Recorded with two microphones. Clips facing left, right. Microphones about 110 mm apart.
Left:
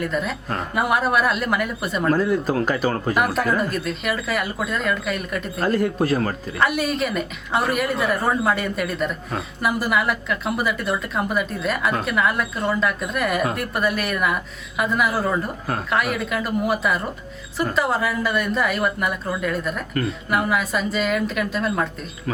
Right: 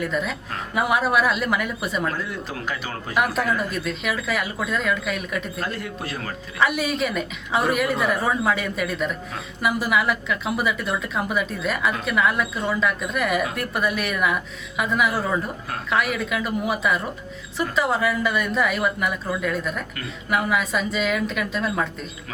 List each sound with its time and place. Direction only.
0.0 s a woman's voice: centre (ahead or behind)
2.0 s speech: 40° left (ahead or behind)
3.2 s a woman's voice: centre (ahead or behind)
5.5 s speech: 45° left (ahead or behind)
6.6 s a woman's voice: centre (ahead or behind)